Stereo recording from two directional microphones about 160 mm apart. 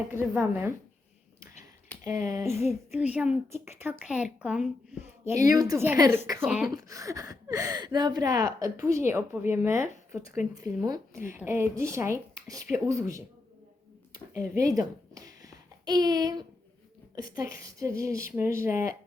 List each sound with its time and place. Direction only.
0.1 s speech: 15° right (ahead or behind)
2.0 s speech: 20° right (ahead or behind)
14.3 s a child's voice: 20° right (ahead or behind)